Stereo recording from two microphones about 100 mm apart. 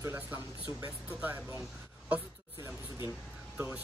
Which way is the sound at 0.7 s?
35° right (ahead or behind).